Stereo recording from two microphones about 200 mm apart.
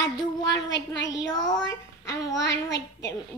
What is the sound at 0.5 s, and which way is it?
A woman's voice, 65° left (ahead or behind).